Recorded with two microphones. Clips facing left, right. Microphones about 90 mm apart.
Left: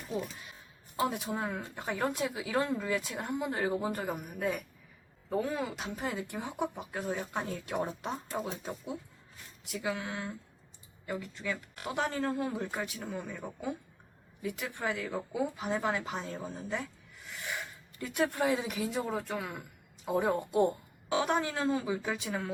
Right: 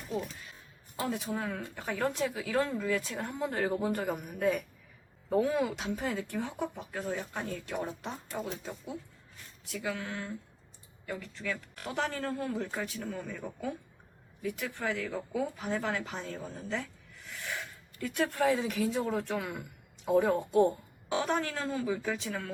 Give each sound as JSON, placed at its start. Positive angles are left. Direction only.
{"t": 0.9, "sound": "speech", "side_deg": 20}